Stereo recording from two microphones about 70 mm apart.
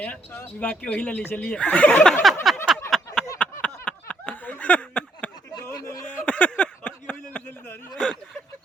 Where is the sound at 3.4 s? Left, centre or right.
Centre.